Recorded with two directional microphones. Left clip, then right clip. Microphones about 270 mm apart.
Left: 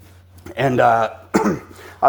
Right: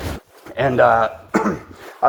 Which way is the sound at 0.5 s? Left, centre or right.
Left.